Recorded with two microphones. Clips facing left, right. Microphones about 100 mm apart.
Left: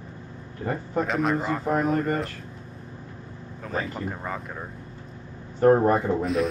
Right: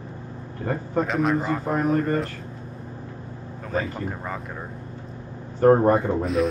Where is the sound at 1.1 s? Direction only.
Centre (ahead or behind).